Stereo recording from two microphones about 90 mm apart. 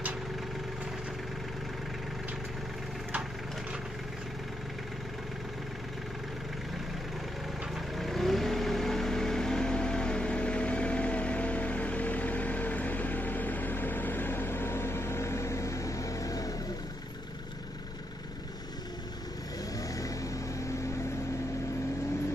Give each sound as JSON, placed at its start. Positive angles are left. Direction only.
{"t": 7.7, "sound": "vehicle", "side_deg": 0}
{"t": 20.0, "sound": "vehicle", "side_deg": 40}